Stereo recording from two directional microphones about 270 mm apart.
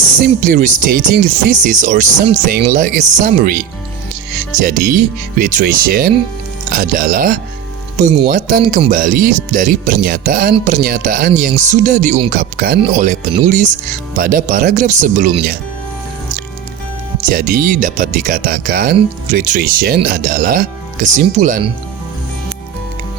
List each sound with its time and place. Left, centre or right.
0.2 s speech: right
2.1 s speech: centre
2.5 s speech: right
17.2 s speech: right